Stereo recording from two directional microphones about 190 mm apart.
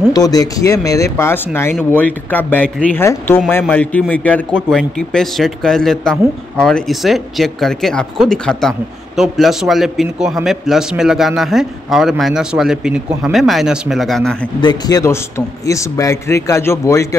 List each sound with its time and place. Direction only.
0.1 s speech: 20° left (ahead or behind); by 14.3 s centre (ahead or behind)
14.6 s speech: 20° left (ahead or behind)